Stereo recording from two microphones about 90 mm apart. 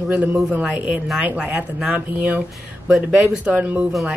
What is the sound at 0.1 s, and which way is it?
Speech, 15° right (ahead or behind).